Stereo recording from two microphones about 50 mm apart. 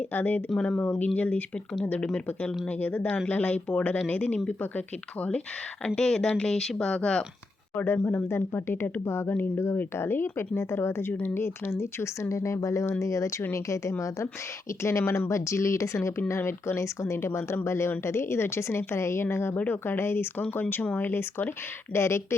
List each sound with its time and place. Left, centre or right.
0.1 s speech: left
4.0 s speech: left
5.8 s speech: centre
7.8 s speech: left
9.4 s speech: left
12.3 s speech: left
14.8 s speech: left
15.3 s speech: left
16.3 s speech: left
19.5 s speech: left
20.5 s speech: left
21.9 s speech: left